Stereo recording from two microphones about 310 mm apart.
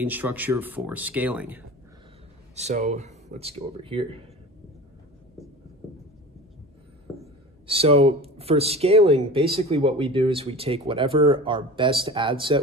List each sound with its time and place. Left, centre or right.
0.0 s speech: centre
2.5 s speech: right
7.1 s a sound: centre
7.6 s speech: centre